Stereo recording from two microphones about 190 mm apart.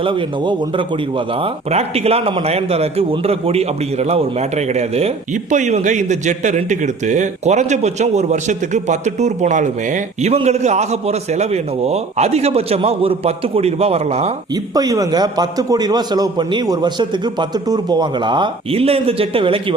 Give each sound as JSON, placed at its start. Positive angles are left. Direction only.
{"t": 0.0, "sound": "a man's voice", "side_deg": -25}
{"t": 14.5, "sound": "a man's voice", "side_deg": -20}